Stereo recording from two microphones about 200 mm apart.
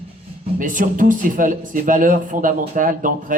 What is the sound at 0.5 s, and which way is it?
Speech, 40° right (ahead or behind).